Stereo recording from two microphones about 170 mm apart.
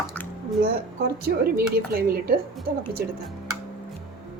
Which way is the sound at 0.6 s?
65° right (ahead or behind).